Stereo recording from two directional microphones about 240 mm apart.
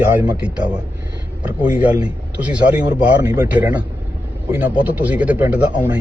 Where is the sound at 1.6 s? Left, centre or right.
Centre.